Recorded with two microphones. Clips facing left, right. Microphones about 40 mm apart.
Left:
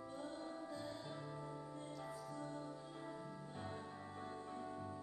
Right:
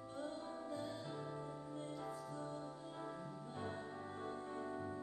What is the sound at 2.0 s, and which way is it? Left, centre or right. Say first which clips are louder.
Music: right 2 dB; right.